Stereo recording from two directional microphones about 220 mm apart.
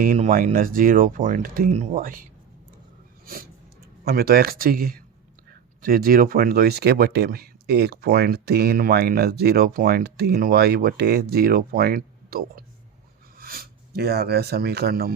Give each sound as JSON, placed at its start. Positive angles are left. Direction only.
{"t": 0.0, "sound": "speech", "side_deg": -40}
{"t": 4.0, "sound": "speech", "side_deg": -45}